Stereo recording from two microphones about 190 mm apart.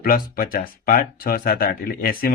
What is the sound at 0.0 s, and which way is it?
Speech, 50° left (ahead or behind).